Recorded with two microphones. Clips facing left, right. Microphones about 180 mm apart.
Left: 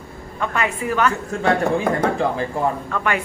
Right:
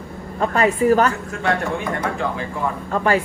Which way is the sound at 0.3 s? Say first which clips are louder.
Right 5 dB; 35° right (ahead or behind).